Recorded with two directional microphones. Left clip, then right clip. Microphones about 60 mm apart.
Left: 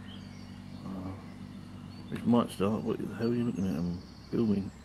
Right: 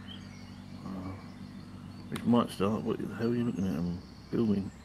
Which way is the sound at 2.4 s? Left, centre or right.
Right.